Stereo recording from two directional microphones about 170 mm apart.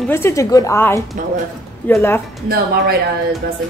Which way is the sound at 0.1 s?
15° left (ahead or behind).